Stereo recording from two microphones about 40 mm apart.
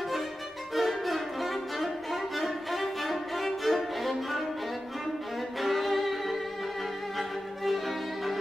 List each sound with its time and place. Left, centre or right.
0.7 s music: centre
2.3 s violin: centre
5.6 s violin: centre